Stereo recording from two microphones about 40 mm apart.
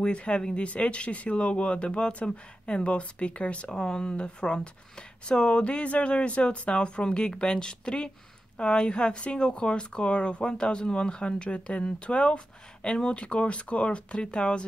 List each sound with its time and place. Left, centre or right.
0.0 s speech: left
3.7 s speech: centre